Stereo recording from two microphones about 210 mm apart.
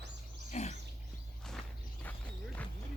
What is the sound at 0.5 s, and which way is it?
Pig, 35° left (ahead or behind).